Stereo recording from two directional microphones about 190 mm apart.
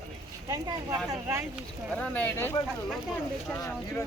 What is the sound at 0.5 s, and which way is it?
Speech, 15° right (ahead or behind).